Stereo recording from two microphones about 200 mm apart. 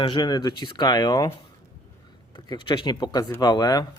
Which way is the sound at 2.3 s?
20° left (ahead or behind).